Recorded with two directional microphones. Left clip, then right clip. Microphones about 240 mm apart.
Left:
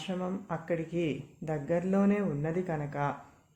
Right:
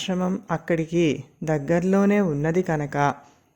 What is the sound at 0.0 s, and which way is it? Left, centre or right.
Speech, right.